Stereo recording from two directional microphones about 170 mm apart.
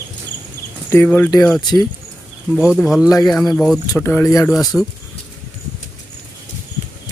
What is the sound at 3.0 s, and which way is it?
Speech, 20° left (ahead or behind).